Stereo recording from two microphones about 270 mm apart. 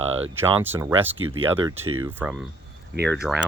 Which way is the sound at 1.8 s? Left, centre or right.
Right.